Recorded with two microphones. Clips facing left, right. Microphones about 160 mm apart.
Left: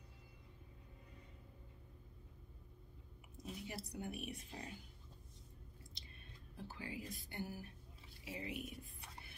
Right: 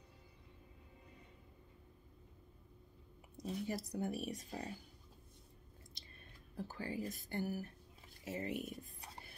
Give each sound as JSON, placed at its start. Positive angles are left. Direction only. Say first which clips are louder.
{"t": 3.3, "sound": "speech", "louder": "right 7 dB", "side_deg": -40}
{"t": 6.5, "sound": "speech", "louder": "right 5 dB", "side_deg": -45}